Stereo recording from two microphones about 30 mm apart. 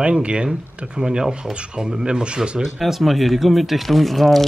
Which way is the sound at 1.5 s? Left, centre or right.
Right.